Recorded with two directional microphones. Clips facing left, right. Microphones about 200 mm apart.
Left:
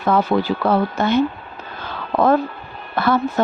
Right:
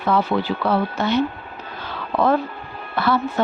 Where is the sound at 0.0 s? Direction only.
45° left (ahead or behind).